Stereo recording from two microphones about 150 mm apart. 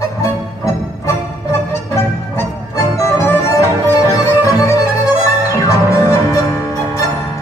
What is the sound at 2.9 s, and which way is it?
Music, 15° left (ahead or behind).